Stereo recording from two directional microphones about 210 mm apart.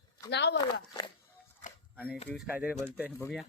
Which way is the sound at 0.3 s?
55° left (ahead or behind).